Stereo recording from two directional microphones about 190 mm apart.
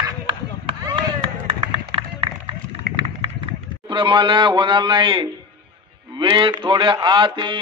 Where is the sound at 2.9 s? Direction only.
50° right (ahead or behind).